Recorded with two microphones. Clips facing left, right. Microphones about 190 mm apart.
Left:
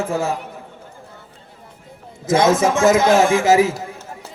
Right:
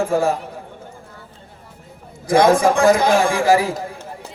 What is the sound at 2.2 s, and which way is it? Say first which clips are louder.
Speech: right 2 dB; 20° left (ahead or behind).